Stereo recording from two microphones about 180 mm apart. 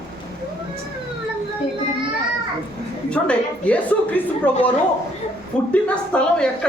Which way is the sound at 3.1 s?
5° left (ahead or behind).